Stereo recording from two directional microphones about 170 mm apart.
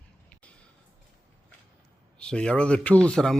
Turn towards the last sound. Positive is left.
turn(degrees=5)  # may be behind; listen again after turning